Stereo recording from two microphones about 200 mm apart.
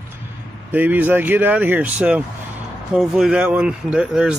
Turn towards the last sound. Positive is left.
turn(degrees=-5)  # may be behind; listen again after turning